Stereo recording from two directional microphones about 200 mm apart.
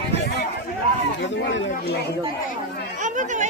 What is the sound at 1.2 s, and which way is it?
Speech, 65° left (ahead or behind).